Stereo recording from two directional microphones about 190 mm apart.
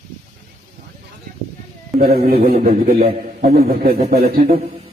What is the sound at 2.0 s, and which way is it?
Speech, 55° right (ahead or behind).